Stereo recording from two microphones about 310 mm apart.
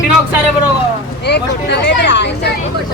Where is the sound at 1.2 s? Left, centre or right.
Left.